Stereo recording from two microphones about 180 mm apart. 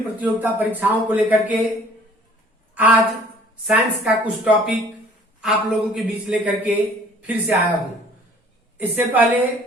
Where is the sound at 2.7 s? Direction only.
10° right (ahead or behind).